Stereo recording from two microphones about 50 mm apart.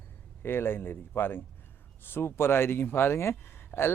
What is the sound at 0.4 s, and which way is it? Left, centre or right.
Speech, left.